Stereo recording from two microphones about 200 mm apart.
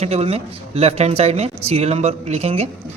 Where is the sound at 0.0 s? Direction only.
30° right (ahead or behind).